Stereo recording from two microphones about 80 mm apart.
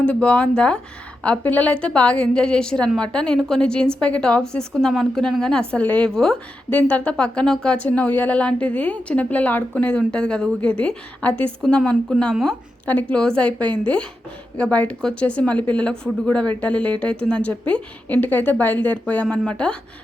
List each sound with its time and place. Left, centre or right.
0.0 s speech: centre
6.7 s speech: centre
12.2 s speech: centre
12.8 s speech: centre